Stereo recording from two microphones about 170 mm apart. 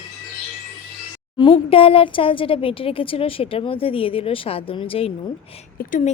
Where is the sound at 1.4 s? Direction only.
30° left (ahead or behind).